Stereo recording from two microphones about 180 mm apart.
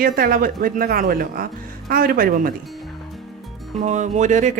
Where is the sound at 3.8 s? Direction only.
40° right (ahead or behind).